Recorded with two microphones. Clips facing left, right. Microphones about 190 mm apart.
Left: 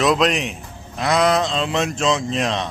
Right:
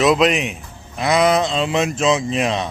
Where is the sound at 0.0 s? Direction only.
5° right (ahead or behind).